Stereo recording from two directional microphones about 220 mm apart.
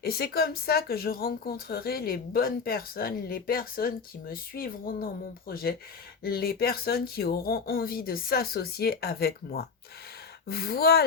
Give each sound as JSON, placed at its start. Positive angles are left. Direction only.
{"t": 0.0, "sound": "speech", "side_deg": 45}